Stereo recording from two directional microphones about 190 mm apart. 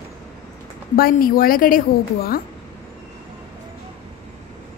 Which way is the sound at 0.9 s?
50° left (ahead or behind).